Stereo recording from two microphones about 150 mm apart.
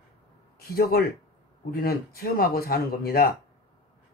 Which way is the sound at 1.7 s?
90° left.